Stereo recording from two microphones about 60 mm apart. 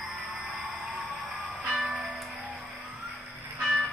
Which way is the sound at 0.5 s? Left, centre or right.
Centre.